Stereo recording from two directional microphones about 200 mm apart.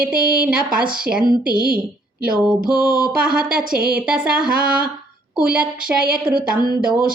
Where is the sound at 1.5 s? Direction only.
45° right (ahead or behind).